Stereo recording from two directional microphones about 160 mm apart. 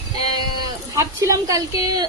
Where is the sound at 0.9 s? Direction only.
20° right (ahead or behind).